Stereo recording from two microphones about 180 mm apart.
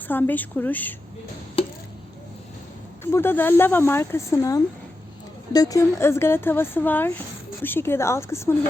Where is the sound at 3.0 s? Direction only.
15° left (ahead or behind).